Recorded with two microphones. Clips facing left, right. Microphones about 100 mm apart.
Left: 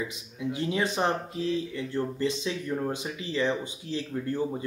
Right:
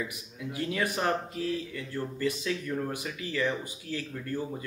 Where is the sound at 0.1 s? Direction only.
25° left (ahead or behind).